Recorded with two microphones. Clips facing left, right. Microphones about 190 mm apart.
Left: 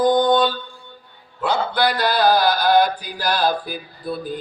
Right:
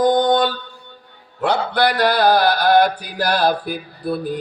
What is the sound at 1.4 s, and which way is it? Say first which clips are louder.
A man's voice: right 2 dB; 65° right (ahead or behind).